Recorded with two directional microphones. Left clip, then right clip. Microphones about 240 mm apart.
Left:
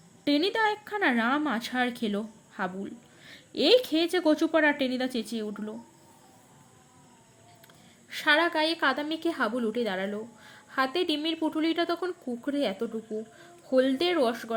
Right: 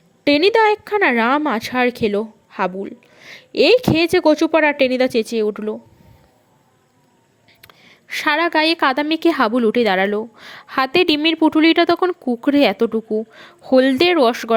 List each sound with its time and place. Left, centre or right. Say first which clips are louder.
0.3 s a woman's voice: right 12 dB; right
7.6 s a woman's voice: right 9 dB; right